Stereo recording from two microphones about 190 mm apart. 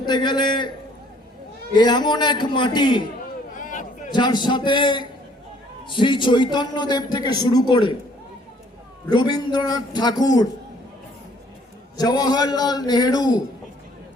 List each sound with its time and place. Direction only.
0.0 s a man's voice: 25° left (ahead or behind)
1.7 s a man's voice: 20° left (ahead or behind)
3.5 s a sound: 45° left (ahead or behind)
4.1 s a man's voice: 25° left (ahead or behind)
9.0 s a man's voice: 25° left (ahead or behind)
11.9 s a man's voice: 20° left (ahead or behind)